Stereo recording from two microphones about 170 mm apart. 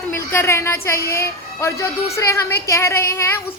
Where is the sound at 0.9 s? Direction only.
65° left (ahead or behind).